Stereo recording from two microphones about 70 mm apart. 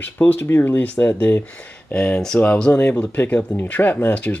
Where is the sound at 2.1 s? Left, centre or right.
Centre.